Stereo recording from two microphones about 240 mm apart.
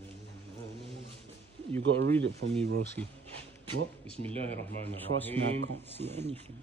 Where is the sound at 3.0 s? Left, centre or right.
Right.